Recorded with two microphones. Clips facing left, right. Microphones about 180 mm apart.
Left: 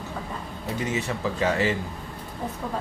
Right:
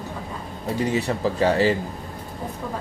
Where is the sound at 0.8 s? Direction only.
35° right (ahead or behind).